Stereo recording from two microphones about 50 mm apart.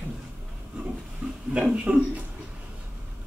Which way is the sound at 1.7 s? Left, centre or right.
Right.